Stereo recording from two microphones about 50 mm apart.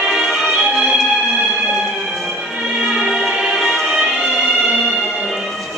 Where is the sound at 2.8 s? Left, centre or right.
Centre.